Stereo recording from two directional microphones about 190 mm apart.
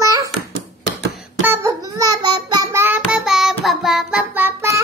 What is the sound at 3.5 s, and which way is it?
Music, centre (ahead or behind).